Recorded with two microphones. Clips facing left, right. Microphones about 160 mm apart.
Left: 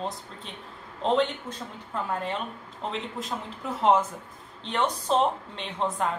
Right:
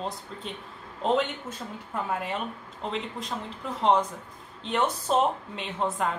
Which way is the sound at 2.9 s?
Centre (ahead or behind).